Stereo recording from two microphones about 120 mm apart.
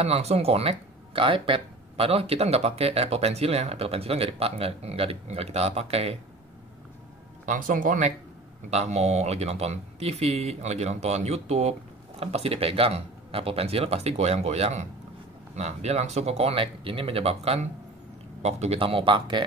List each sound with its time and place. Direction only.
0.0 s speech: 60° right (ahead or behind)
7.4 s speech: 90° right
8.6 s speech: 65° right (ahead or behind); by 19.4 s 40° right (ahead or behind)